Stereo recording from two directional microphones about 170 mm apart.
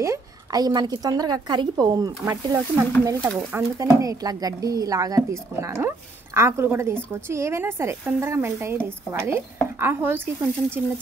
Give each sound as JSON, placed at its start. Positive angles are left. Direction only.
{"t": 0.0, "sound": "a woman's voice", "side_deg": -20}